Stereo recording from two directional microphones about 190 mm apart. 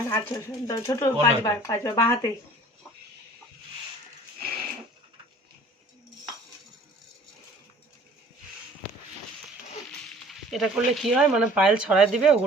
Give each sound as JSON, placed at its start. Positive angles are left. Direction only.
{"t": 0.1, "sound": "speech", "side_deg": 15}
{"t": 10.2, "sound": "speech", "side_deg": 0}